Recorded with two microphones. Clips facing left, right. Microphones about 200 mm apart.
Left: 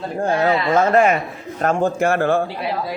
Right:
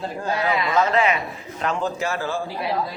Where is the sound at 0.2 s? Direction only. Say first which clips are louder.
Left 6 dB; 50° left (ahead or behind).